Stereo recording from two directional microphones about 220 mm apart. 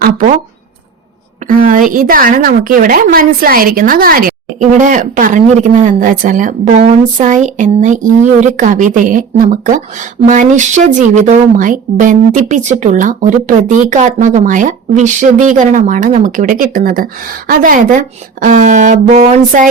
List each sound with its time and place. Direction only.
0.0 s speech: 40° right (ahead or behind)
1.5 s speech: 40° right (ahead or behind)